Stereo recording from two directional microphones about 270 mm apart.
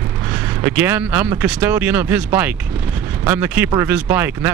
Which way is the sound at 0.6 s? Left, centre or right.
Centre.